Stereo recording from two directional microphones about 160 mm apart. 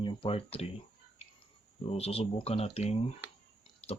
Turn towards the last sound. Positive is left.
turn(degrees=45)  # may be behind; listen again after turning